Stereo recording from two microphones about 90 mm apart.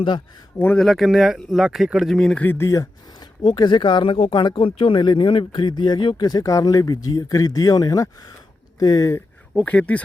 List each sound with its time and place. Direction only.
0.8 s speech: centre (ahead or behind)
2.1 s speech: 5° left (ahead or behind)
2.4 s speech: 25° left (ahead or behind)
3.4 s speech: 55° left (ahead or behind); by 9.2 s 40° left (ahead or behind)
9.6 s speech: 15° left (ahead or behind)